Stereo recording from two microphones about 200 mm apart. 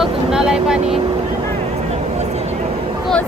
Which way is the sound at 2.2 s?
35° right (ahead or behind).